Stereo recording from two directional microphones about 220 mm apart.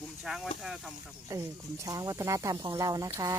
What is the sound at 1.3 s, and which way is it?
Speech, 15° right (ahead or behind).